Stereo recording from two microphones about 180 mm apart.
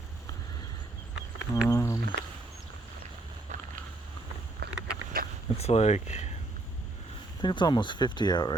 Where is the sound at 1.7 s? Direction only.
15° left (ahead or behind).